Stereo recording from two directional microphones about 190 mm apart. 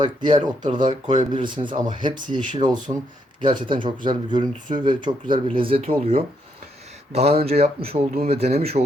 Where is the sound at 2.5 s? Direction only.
40° right (ahead or behind).